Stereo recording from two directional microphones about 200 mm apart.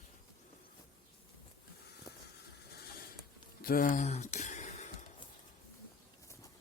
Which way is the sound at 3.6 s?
45° left (ahead or behind).